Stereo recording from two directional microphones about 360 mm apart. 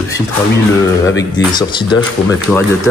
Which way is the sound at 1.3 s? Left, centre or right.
Centre.